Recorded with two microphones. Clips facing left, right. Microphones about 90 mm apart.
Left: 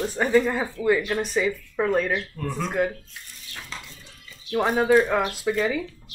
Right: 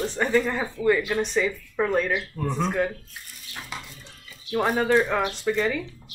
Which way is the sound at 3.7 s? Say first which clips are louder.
Right 2 dB; 15° right (ahead or behind).